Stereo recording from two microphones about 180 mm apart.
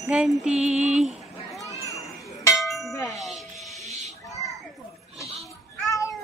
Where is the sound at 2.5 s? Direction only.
Centre (ahead or behind).